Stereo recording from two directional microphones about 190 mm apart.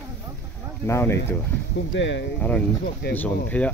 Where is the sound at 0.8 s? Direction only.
15° left (ahead or behind).